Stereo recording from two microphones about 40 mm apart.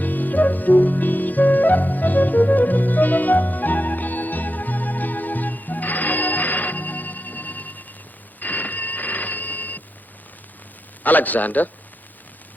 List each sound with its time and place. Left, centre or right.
0.0 s music: left
8.4 s alarm clock: left
11.0 s a man's voice: left